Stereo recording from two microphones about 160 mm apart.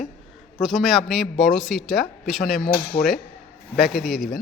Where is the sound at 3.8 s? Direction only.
Centre (ahead or behind).